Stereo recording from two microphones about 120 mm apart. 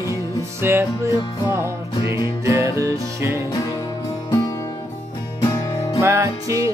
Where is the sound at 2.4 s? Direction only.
25° right (ahead or behind).